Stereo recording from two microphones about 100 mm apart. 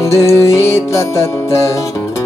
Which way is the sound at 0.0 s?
30° left (ahead or behind).